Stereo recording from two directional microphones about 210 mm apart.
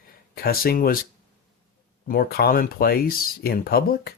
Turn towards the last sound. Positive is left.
turn(degrees=45)  # may be behind; listen again after turning